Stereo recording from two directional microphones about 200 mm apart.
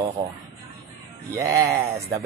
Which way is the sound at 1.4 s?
15° right (ahead or behind).